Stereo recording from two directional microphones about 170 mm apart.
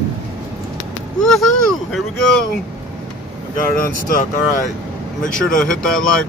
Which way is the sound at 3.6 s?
55° left (ahead or behind).